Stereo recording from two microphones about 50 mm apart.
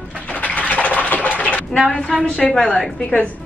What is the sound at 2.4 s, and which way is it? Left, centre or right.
Speech, centre.